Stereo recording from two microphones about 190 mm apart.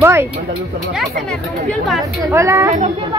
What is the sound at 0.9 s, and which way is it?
Speech, 5° left (ahead or behind).